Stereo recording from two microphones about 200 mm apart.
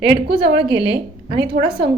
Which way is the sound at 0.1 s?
25° right (ahead or behind).